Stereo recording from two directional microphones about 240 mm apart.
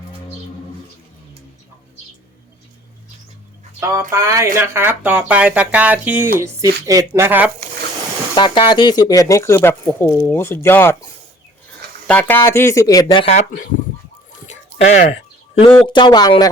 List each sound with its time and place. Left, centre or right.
3.8 s speech: centre
8.4 s speech: centre
14.4 s a sound: left
15.7 s speech: centre